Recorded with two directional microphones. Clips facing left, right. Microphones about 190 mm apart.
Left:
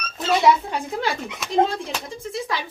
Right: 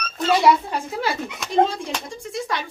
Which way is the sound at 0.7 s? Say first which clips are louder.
Even; centre (ahead or behind).